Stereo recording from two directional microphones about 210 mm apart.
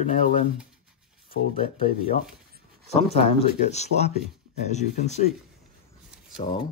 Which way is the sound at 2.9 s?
30° left (ahead or behind).